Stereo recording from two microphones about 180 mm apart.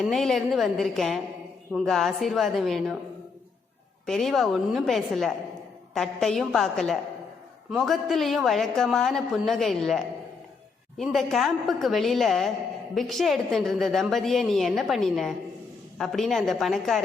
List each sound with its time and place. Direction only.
0.0 s a woman's voice: centre (ahead or behind)
4.0 s a woman's voice: centre (ahead or behind)